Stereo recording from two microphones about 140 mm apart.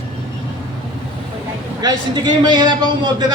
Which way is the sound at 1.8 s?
30° right (ahead or behind).